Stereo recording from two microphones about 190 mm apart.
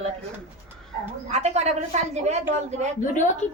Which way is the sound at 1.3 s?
35° right (ahead or behind).